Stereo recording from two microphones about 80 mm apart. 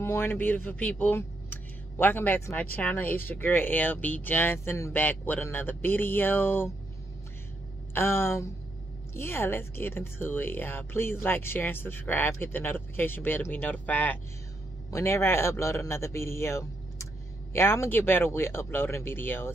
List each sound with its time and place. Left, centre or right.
0.0 s speech: left
4.9 s speech: left
7.9 s a man's voice: left
14.9 s a man's voice: left